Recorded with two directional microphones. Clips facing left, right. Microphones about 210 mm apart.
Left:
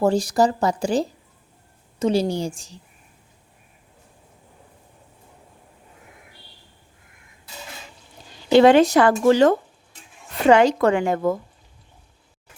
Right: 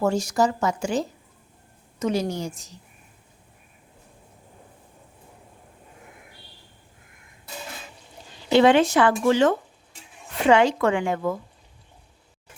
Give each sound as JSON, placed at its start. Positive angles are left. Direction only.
{"t": 0.0, "sound": "speech", "side_deg": 35}
{"t": 8.5, "sound": "speech", "side_deg": 40}